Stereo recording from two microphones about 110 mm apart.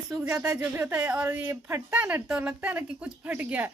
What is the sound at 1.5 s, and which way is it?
A woman's voice, 20° right (ahead or behind).